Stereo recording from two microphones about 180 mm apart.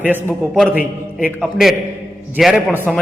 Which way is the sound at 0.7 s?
55° left (ahead or behind).